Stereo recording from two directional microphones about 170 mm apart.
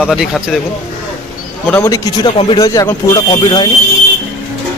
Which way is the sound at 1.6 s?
15° left (ahead or behind).